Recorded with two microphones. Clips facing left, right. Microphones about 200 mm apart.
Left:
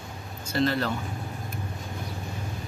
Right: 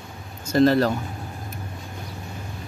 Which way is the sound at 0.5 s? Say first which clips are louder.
Right 8 dB; 40° right (ahead or behind).